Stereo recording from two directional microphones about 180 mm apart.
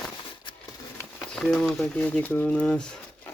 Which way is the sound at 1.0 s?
5° left (ahead or behind).